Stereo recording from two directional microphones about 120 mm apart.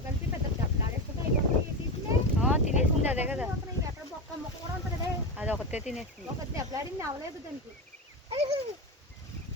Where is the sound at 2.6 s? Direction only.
75° left (ahead or behind).